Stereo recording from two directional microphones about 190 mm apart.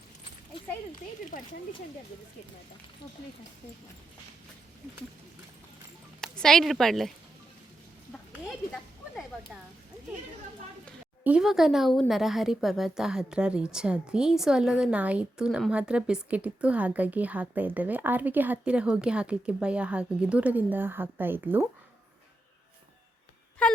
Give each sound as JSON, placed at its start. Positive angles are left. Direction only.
{"t": 1.3, "sound": "speech", "side_deg": 45}
{"t": 6.1, "sound": "speech", "side_deg": 5}
{"t": 8.3, "sound": "speech", "side_deg": 0}
{"t": 11.2, "sound": "speech", "side_deg": -5}